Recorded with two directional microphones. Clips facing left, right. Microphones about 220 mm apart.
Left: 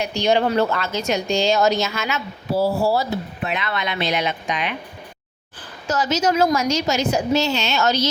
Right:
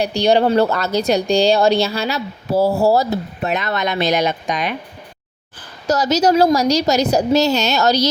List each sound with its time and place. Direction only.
0.0 s speech: 35° right (ahead or behind)
5.9 s speech: 40° right (ahead or behind)